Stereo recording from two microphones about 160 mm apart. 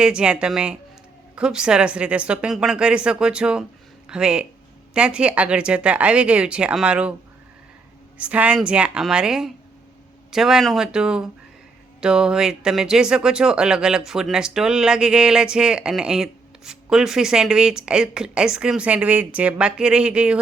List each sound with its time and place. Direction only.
0.0 s speech: 5° right (ahead or behind)
8.2 s speech: 10° right (ahead or behind)